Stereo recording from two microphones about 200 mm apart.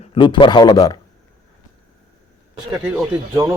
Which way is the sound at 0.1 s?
25° left (ahead or behind).